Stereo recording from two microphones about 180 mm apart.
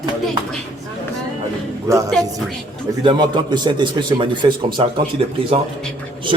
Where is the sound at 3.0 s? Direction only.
25° right (ahead or behind).